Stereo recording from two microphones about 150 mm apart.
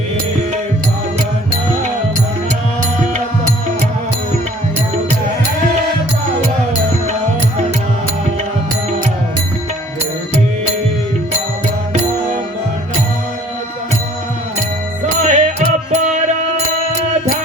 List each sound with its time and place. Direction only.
15.2 s music: 50° right (ahead or behind)